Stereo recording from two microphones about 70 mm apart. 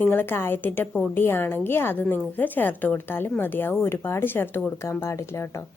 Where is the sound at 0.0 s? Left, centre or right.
Left.